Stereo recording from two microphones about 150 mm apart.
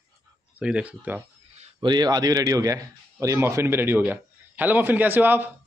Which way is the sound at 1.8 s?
30° right (ahead or behind).